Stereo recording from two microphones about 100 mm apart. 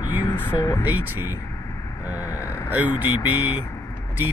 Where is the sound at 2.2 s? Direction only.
30° left (ahead or behind).